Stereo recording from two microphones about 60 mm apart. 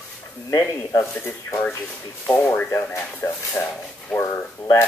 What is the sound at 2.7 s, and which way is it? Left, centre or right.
Speech, left.